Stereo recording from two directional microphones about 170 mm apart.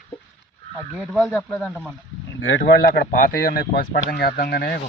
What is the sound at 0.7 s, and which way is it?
Speech, 5° left (ahead or behind).